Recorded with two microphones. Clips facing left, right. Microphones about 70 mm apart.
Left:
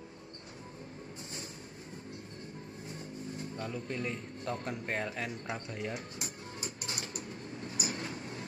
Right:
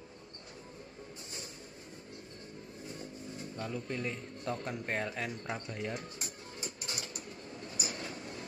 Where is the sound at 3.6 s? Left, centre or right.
Centre.